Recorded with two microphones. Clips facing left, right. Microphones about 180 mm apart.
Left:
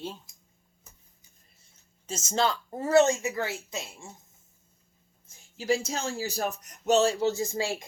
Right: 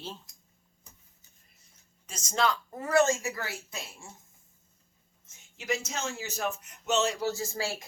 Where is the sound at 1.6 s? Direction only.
25° left (ahead or behind).